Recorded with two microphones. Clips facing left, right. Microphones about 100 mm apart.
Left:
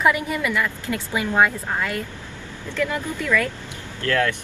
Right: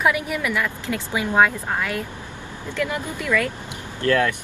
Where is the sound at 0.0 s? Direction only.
10° right (ahead or behind).